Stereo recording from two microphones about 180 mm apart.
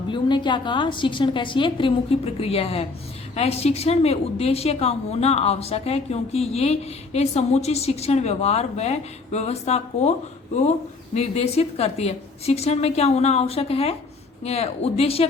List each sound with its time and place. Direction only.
0.1 s a woman's voice: 25° left (ahead or behind)